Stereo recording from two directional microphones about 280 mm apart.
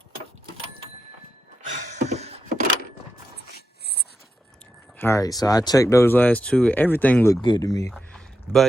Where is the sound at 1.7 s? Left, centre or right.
Right.